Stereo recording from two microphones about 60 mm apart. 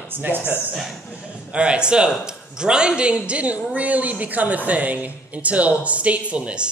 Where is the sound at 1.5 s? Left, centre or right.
Centre.